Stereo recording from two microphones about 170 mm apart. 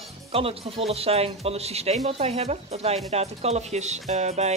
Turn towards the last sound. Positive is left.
turn(degrees=-40)  # may be behind; listen again after turning